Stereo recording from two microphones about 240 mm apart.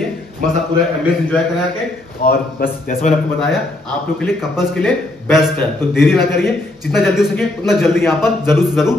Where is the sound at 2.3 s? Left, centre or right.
Left.